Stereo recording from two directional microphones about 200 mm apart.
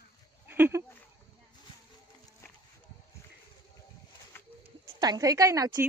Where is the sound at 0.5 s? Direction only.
10° right (ahead or behind).